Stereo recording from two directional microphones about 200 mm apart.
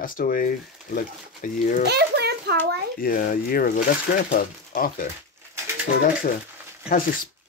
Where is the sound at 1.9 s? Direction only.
55° right (ahead or behind).